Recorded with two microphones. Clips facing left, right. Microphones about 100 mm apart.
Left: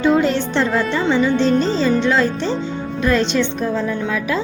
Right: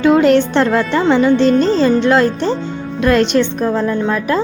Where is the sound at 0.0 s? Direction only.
75° right (ahead or behind); by 4.4 s 50° right (ahead or behind).